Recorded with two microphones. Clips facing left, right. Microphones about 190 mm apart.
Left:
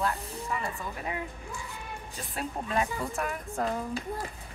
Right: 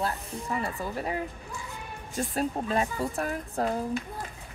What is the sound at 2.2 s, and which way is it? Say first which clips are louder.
A woman's voice: right 7 dB; 40° right (ahead or behind).